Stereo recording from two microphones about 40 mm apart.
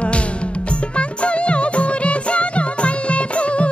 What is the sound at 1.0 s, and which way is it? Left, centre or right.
Music, left.